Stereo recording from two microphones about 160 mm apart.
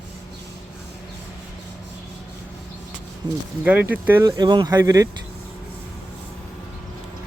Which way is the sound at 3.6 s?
10° right (ahead or behind).